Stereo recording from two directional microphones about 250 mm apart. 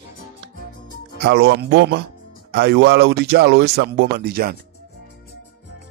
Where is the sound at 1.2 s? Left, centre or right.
Right.